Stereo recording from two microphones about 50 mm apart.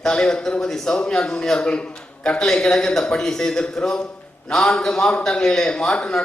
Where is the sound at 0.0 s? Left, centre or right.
Centre.